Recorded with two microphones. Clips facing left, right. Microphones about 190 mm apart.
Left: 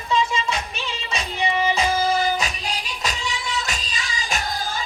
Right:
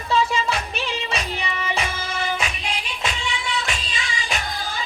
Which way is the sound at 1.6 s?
30° left (ahead or behind).